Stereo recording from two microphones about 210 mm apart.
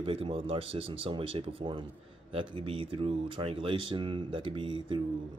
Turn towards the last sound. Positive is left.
turn(degrees=-25)  # may be behind; listen again after turning